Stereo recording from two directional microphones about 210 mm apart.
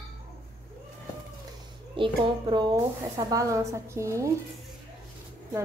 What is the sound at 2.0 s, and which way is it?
A woman's voice, 20° right (ahead or behind).